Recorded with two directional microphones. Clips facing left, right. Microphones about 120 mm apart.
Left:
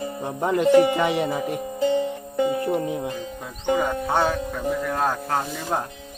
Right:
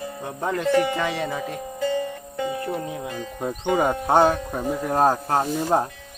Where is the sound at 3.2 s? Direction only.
45° right (ahead or behind).